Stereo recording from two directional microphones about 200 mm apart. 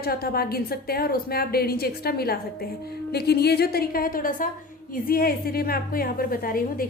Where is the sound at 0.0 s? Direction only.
50° left (ahead or behind).